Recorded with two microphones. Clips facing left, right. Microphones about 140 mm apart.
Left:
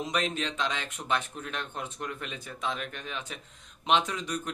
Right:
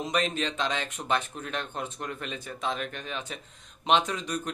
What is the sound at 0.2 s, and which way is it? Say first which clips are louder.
A man's voice: right 3 dB; 5° left (ahead or behind).